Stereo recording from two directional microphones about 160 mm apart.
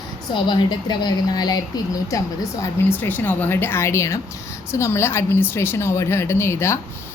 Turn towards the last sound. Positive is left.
turn(degrees=15)  # may be behind; listen again after turning